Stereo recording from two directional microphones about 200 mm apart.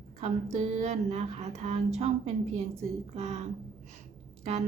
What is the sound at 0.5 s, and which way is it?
A woman's voice, 30° right (ahead or behind).